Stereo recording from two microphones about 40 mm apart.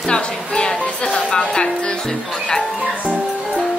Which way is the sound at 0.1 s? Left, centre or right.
Centre.